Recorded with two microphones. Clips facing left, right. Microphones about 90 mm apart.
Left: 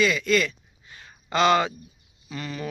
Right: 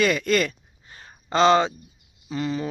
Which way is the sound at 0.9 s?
30° right (ahead or behind).